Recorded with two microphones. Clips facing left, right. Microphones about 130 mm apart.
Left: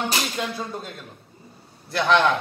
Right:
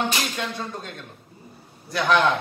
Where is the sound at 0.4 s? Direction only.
5° left (ahead or behind).